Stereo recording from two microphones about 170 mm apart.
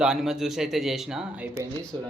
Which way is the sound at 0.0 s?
5° right (ahead or behind).